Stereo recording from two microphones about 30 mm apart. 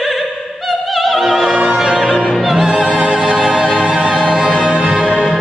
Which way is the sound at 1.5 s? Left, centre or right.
Right.